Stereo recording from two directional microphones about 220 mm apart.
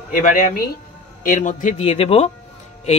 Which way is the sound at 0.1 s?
40° left (ahead or behind).